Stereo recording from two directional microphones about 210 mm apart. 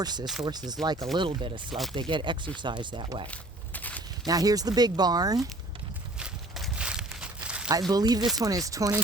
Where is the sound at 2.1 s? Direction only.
20° right (ahead or behind).